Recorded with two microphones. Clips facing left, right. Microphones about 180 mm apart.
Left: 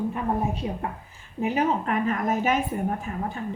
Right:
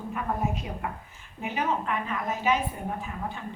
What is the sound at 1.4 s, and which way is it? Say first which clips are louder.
A woman's voice: left 5 dB; 35° left (ahead or behind).